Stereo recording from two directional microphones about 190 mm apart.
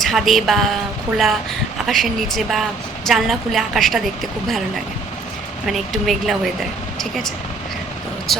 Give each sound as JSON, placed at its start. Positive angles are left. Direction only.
{"t": 0.0, "sound": "a woman's voice", "side_deg": 0}
{"t": 5.6, "sound": "a woman's voice", "side_deg": 0}